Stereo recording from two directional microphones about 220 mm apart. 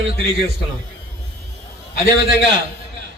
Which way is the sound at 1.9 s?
45° left (ahead or behind).